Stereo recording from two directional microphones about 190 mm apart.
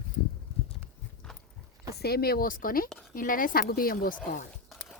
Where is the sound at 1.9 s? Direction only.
55° left (ahead or behind).